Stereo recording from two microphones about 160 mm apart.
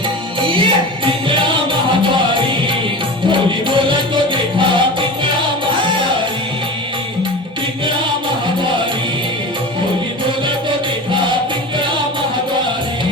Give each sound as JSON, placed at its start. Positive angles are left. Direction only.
{"t": 0.4, "sound": "music", "side_deg": -30}
{"t": 2.1, "sound": "music", "side_deg": -30}